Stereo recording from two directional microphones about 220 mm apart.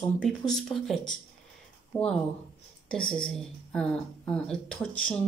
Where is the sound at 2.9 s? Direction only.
5° left (ahead or behind).